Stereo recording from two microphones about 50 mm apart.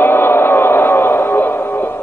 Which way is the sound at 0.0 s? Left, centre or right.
Left.